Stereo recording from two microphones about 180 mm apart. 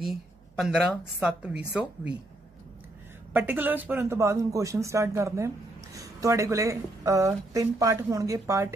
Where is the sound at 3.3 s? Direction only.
10° right (ahead or behind).